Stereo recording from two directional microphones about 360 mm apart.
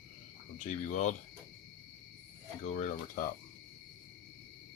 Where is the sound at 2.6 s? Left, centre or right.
Centre.